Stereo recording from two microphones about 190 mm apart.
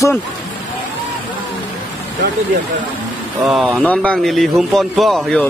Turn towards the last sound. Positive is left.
turn(degrees=0)  # may be behind; listen again after turning